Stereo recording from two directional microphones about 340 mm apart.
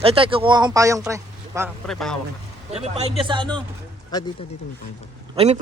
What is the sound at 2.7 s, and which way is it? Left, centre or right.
Speech, centre.